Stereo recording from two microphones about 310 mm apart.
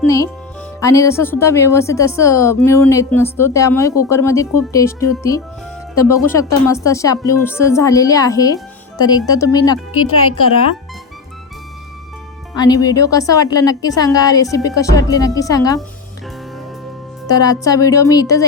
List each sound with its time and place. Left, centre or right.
0.8 s a woman's voice: centre
9.9 s speech: left
12.5 s a woman's voice: centre
17.2 s a woman's voice: centre